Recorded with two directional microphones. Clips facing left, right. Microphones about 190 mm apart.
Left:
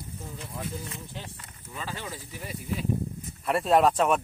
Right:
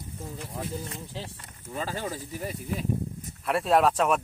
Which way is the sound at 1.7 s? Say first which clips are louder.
Right 5 dB; 40° right (ahead or behind).